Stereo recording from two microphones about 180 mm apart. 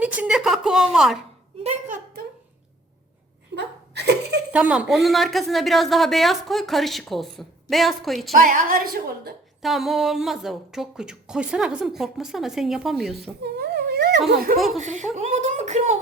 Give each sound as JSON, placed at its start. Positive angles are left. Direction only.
{"t": 0.0, "sound": "a woman's voice", "side_deg": -5}
{"t": 1.6, "sound": "a sound", "side_deg": -45}
{"t": 3.5, "sound": "laughter", "side_deg": -70}
{"t": 4.5, "sound": "speech", "side_deg": -5}
{"t": 8.4, "sound": "a woman's voice", "side_deg": -50}
{"t": 9.6, "sound": "speech", "side_deg": 0}
{"t": 13.4, "sound": "a sound", "side_deg": -65}
{"t": 14.3, "sound": "speech", "side_deg": -55}
{"t": 14.8, "sound": "speech", "side_deg": -40}